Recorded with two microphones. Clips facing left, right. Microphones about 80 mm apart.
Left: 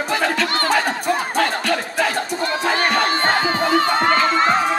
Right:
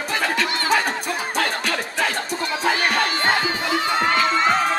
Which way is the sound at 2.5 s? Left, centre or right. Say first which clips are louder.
Left 1 dB; left.